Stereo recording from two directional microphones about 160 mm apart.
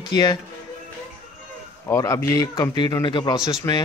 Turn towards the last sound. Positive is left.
turn(degrees=15)  # may be behind; listen again after turning